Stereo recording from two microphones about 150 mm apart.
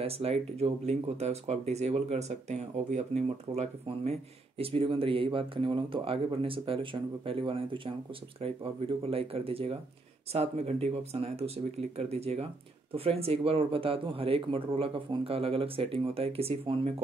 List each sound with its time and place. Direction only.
0.0 s speech: 45° right (ahead or behind)